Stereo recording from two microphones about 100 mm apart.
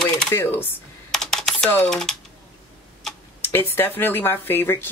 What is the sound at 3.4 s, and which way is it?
Speech, 25° left (ahead or behind).